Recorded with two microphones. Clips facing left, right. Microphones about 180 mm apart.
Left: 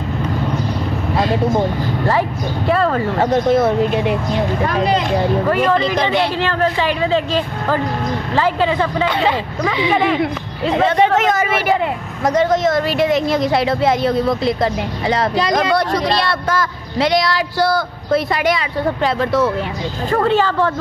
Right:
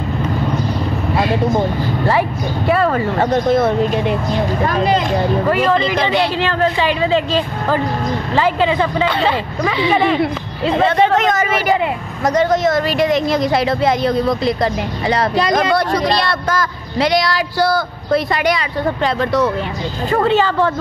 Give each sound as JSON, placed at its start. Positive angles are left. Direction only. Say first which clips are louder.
{"t": 2.0, "sound": "a woman's voice", "louder": "right 1 dB", "side_deg": -10}
{"t": 3.2, "sound": "speech", "louder": "left 1 dB", "side_deg": 10}
{"t": 6.4, "sound": "a woman's voice", "louder": "right 1 dB", "side_deg": -15}
{"t": 9.0, "sound": "speech", "louder": "even", "side_deg": 15}
{"t": 10.7, "sound": "a woman's voice", "louder": "even", "side_deg": 15}
{"t": 20.1, "sound": "a woman's voice", "louder": "right 1 dB", "side_deg": -20}